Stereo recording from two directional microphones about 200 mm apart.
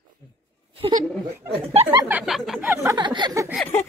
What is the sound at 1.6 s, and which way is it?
Speech, 30° right (ahead or behind).